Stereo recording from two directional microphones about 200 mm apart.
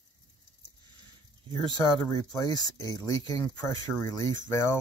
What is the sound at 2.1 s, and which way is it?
Speech, 15° left (ahead or behind).